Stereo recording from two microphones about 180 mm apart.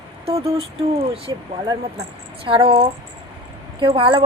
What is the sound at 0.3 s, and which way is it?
A woman's voice, 35° right (ahead or behind).